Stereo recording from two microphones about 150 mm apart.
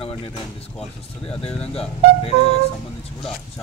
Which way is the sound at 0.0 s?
35° left (ahead or behind).